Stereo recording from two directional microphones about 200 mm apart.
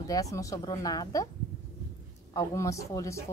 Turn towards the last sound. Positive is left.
turn(degrees=15)  # may be behind; listen again after turning